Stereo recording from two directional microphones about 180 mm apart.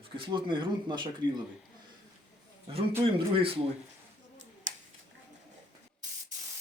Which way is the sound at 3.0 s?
30° right (ahead or behind).